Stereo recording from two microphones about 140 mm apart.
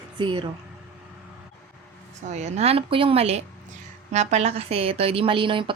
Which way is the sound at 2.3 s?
55° right (ahead or behind).